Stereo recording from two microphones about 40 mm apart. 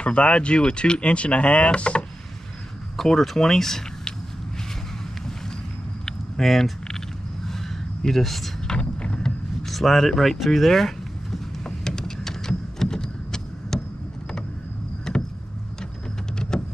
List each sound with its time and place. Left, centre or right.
0.0 s speech: left
3.0 s speech: centre
6.0 s a sound: centre
8.6 s vehicle: left
9.7 s speech: centre
11.6 s a sound: centre
15.1 s vehicle: centre
16.3 s vehicle: centre